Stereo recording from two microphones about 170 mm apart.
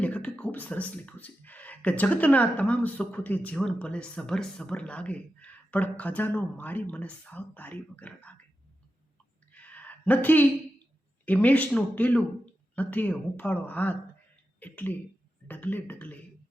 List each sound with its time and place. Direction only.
0.0 s speech: 10° left (ahead or behind)
9.5 s a sound: 10° left (ahead or behind)
11.3 s speech: 10° left (ahead or behind)